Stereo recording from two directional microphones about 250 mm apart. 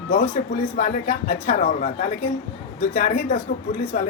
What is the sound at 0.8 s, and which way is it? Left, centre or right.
A woman's voice, left.